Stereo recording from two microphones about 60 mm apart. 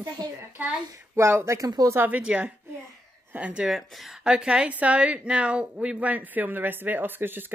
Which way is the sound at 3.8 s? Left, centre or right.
Centre.